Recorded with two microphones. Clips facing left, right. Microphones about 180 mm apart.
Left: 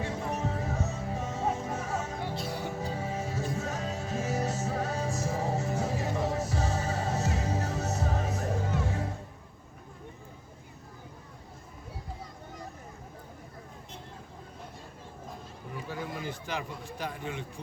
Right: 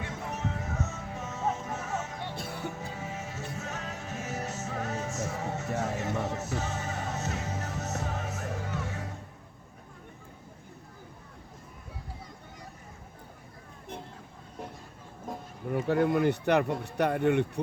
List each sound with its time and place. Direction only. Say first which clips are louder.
0.0 s music: left 3 dB; 35° left (ahead or behind)
2.3 s music: left 3 dB; 55° right (ahead or behind)
2.8 s music: left 4 dB; 35° left (ahead or behind)
15.7 s speech: right 12 dB; 60° right (ahead or behind)